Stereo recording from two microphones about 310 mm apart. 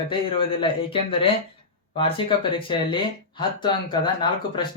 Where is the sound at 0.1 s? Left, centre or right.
Centre.